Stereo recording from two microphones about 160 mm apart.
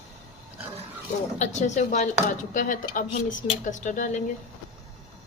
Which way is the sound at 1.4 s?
45° left (ahead or behind).